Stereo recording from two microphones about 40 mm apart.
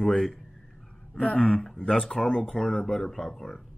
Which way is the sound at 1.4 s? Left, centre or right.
Centre.